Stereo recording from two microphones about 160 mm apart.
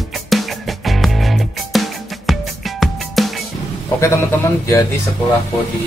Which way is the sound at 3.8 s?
20° left (ahead or behind).